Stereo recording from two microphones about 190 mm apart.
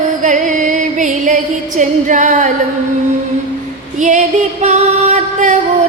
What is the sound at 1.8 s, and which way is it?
Female singing, 40° right (ahead or behind).